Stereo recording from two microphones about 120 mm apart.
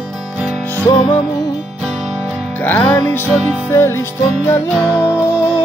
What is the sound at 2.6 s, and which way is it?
Music, 15° left (ahead or behind).